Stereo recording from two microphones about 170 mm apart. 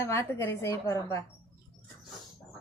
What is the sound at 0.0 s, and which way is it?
A woman's voice, 15° left (ahead or behind).